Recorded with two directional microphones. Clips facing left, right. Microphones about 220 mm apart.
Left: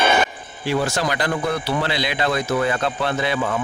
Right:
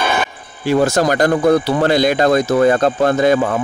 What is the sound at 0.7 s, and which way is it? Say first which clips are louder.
Speech: right 8 dB; 45° right (ahead or behind).